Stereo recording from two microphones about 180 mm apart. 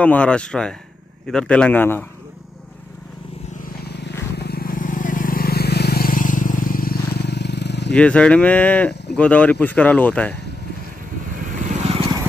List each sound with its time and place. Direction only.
0.0 s a man's voice: 5° left (ahead or behind)
3.8 s vehicle: 70° left (ahead or behind)
7.9 s speech: 5° left (ahead or behind)